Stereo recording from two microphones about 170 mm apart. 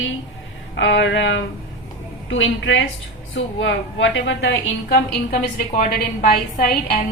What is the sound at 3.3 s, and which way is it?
A woman's voice, 90° left.